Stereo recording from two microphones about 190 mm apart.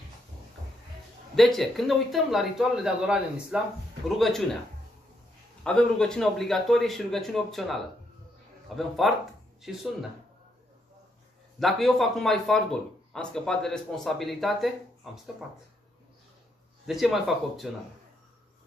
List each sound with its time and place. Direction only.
1.3 s speech: centre (ahead or behind)
5.6 s speech: 5° left (ahead or behind)
11.6 s speech: centre (ahead or behind)
16.8 s speech: centre (ahead or behind)